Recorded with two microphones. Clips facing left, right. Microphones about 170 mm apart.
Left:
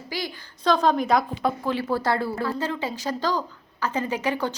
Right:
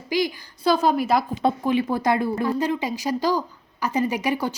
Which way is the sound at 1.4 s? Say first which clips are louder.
Right 4 dB; 20° right (ahead or behind).